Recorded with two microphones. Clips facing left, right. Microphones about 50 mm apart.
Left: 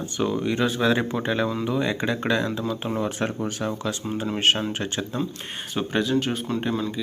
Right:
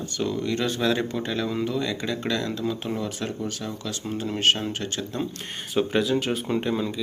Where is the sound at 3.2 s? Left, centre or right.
Left.